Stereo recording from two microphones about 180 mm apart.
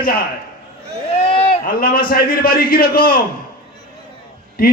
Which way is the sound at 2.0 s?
55° left (ahead or behind).